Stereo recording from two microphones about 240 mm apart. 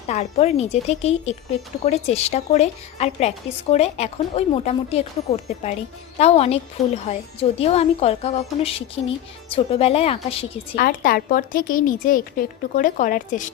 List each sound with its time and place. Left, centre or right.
0.1 s speech: left
10.8 s a woman's voice: left